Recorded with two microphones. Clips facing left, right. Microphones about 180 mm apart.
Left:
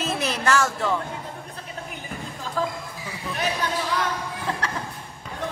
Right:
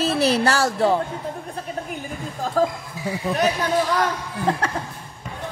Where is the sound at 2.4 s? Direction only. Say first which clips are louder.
Right 7 dB; 45° right (ahead or behind).